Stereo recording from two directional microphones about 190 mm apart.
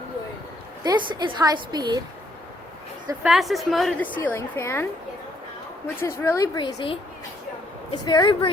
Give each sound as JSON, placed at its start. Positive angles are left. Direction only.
{"t": 0.9, "sound": "a woman's voice", "side_deg": -25}
{"t": 3.2, "sound": "a woman's voice", "side_deg": 0}
{"t": 6.0, "sound": "a woman's voice", "side_deg": 15}
{"t": 8.0, "sound": "a woman's voice", "side_deg": 20}